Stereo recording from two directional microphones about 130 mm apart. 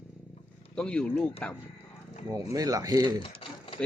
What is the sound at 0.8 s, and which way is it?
Speech, 5° left (ahead or behind).